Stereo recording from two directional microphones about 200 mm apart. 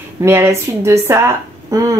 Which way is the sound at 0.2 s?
15° right (ahead or behind).